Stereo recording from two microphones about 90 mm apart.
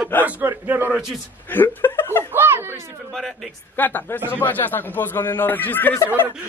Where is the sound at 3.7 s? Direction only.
20° left (ahead or behind).